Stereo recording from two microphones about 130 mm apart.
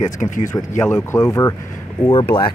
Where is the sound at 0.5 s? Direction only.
20° left (ahead or behind).